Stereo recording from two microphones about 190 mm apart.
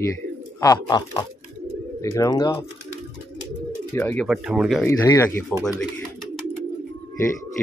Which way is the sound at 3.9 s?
10° left (ahead or behind).